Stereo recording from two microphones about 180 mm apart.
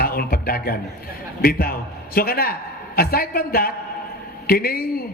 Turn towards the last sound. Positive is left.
turn(degrees=55)  # may be behind; listen again after turning